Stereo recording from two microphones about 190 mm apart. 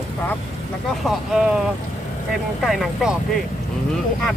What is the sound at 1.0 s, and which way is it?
Speech, 5° right (ahead or behind).